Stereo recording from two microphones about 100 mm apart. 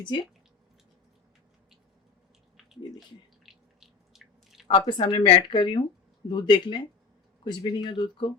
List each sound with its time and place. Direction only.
0.0 s speech: 50° left (ahead or behind)
3.4 s a sound: 5° right (ahead or behind)
4.9 s speech: 50° left (ahead or behind)